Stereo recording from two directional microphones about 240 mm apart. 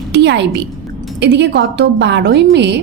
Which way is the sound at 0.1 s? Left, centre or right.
Right.